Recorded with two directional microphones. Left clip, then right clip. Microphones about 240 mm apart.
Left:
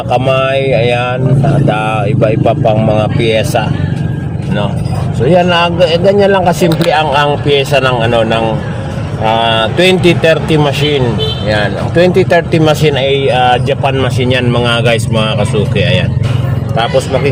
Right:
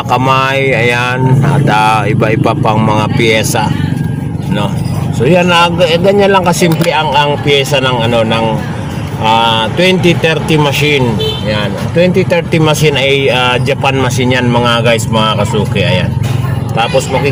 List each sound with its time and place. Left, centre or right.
0.1 s speech: centre
5.3 s speech: centre
9.6 s speech: centre
11.4 s speech: centre